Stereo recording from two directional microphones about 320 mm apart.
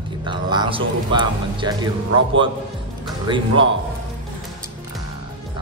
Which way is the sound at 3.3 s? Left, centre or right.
Centre.